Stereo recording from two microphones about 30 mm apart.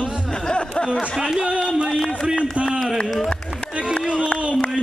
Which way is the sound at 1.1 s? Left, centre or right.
Centre.